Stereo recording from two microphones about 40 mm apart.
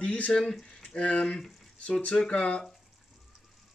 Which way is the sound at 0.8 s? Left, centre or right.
Left.